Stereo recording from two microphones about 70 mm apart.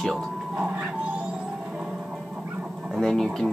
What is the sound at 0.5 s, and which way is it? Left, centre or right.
Cat, centre.